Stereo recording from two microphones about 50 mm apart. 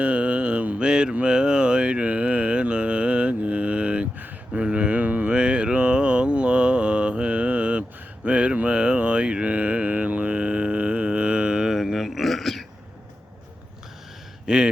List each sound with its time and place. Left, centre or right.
0.0 s mantra: right
0.9 s mantra: centre
11.8 s a sound: centre
14.4 s speech: centre